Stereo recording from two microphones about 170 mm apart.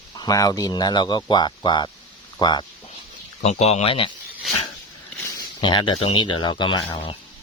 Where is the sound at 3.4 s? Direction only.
40° left (ahead or behind).